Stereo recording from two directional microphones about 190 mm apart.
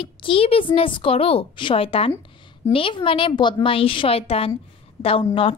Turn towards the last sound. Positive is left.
turn(degrees=30)  # may be behind; listen again after turning